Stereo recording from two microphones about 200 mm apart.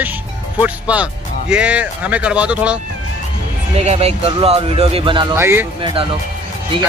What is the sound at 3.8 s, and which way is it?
Speech, 30° right (ahead or behind).